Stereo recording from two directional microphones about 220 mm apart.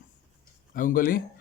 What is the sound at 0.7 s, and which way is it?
Speech, 40° left (ahead or behind).